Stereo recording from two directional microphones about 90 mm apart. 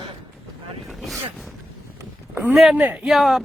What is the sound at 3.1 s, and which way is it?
Speech, centre (ahead or behind).